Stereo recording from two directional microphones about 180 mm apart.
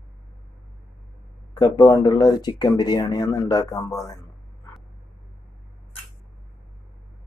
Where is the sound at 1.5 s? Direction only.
25° left (ahead or behind).